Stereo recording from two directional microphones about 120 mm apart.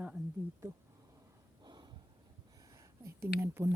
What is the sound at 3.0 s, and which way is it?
Speech, 20° right (ahead or behind).